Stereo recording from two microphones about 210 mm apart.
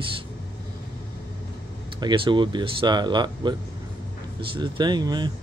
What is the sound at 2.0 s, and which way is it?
Speech, 20° right (ahead or behind).